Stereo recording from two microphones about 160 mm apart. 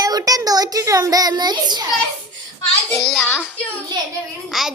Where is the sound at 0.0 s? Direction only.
25° right (ahead or behind).